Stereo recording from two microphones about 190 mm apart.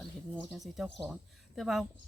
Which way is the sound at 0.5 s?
Centre (ahead or behind).